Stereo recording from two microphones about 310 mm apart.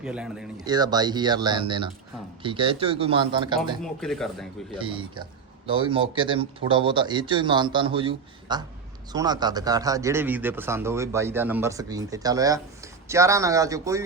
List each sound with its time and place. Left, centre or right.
0.0 s speech: centre
3.8 s speech: centre
4.8 s speech: centre